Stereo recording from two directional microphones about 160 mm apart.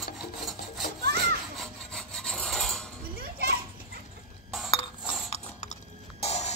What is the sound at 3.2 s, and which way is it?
Children playing, 75° right (ahead or behind).